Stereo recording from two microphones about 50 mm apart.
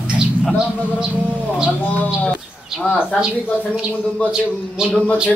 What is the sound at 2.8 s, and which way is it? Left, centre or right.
Speech, left.